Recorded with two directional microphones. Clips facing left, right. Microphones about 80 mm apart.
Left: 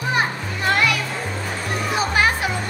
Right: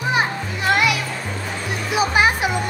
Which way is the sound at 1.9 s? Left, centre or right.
Centre.